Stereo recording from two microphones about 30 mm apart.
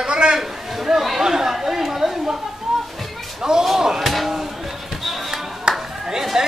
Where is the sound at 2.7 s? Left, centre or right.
Centre.